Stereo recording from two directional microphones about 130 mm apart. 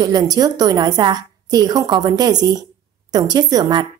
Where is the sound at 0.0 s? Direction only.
30° right (ahead or behind).